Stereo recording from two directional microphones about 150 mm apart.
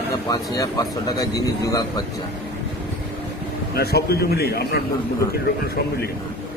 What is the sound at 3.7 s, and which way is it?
A man's voice, 90° left.